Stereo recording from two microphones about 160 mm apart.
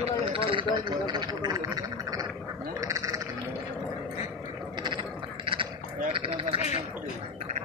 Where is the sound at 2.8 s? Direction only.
20° right (ahead or behind).